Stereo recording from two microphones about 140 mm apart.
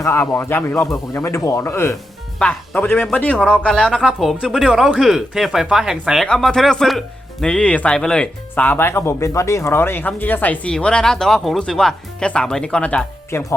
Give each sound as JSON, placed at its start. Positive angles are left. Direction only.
{"t": 0.0, "sound": "speech", "side_deg": 20}